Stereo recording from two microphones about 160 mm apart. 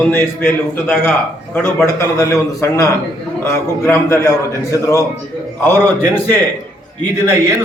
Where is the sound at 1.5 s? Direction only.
15° left (ahead or behind).